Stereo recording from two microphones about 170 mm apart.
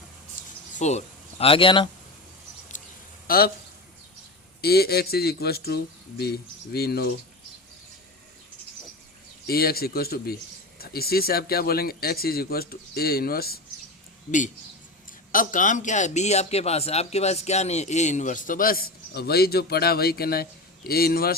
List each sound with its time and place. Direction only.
0.4 s a sound: 55° left (ahead or behind)
0.8 s speech: 40° left (ahead or behind)
3.2 s speech: 60° left (ahead or behind)
4.6 s speech: 65° left (ahead or behind)
9.5 s speech: 65° left (ahead or behind)
14.3 s a man's voice: 50° left (ahead or behind); by 21.3 s 65° left (ahead or behind)